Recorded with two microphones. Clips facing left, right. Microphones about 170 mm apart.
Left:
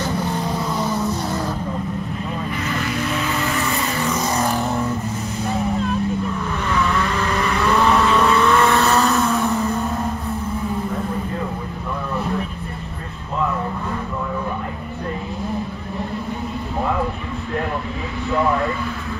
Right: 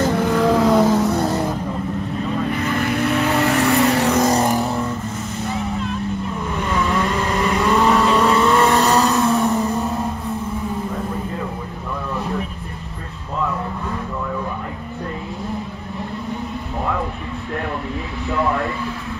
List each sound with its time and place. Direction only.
0.1 s vehicle: 85° right
2.6 s vehicle: 55° right (ahead or behind)
4.2 s vehicle: 40° right (ahead or behind)
6.7 s vehicle: 20° right (ahead or behind)